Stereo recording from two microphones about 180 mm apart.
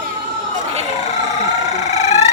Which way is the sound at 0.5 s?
35° right (ahead or behind).